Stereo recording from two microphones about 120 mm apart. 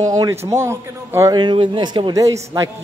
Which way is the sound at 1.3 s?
40° right (ahead or behind).